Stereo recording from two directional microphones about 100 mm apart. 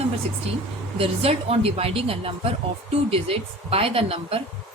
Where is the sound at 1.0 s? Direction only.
85° right.